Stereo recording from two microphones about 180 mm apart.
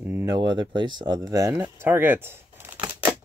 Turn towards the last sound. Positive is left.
turn(degrees=-10)  # may be behind; listen again after turning